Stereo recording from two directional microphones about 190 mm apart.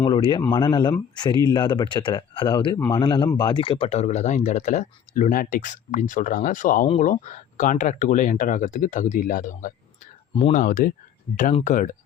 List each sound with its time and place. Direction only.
0.0 s speech: 25° left (ahead or behind); by 11.9 s 45° left (ahead or behind)